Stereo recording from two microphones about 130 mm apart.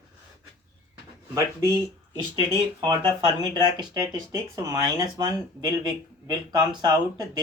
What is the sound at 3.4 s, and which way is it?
Speech, 35° right (ahead or behind).